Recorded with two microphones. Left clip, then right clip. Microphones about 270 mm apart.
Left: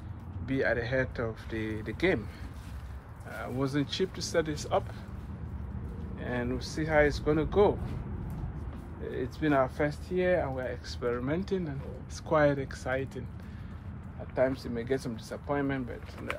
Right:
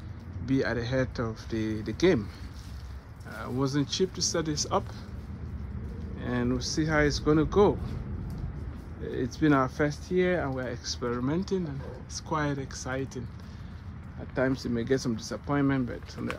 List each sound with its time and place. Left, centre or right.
0.5 s speech: centre
3.3 s speech: centre
6.2 s speech: right
9.1 s speech: right
14.3 s speech: right